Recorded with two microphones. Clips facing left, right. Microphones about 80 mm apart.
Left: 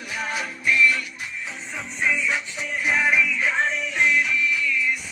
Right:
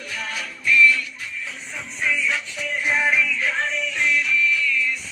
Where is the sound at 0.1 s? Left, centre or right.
Centre.